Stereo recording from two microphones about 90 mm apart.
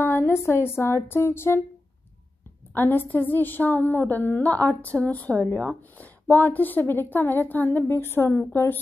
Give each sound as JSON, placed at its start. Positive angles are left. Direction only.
{"t": 0.0, "sound": "speech", "side_deg": 25}
{"t": 2.7, "sound": "a woman's voice", "side_deg": 25}